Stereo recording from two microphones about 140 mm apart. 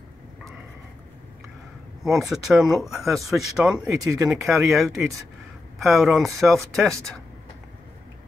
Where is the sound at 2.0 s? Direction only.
Centre (ahead or behind).